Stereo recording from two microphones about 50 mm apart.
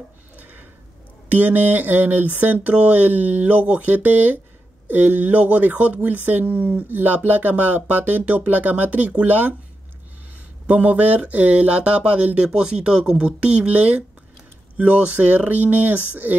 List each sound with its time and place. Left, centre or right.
0.4 s a sound: right
1.3 s speech: right
10.7 s speech: right